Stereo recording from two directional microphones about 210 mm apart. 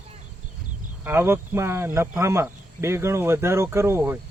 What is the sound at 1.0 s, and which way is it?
Speech, 10° right (ahead or behind).